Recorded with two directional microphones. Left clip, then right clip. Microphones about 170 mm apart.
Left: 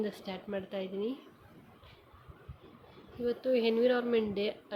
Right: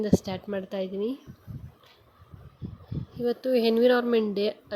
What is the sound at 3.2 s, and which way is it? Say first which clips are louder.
Speech: right 5 dB; 45° right (ahead or behind).